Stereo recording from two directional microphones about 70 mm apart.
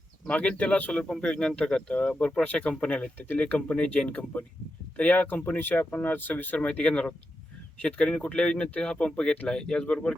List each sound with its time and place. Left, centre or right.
0.3 s speech: centre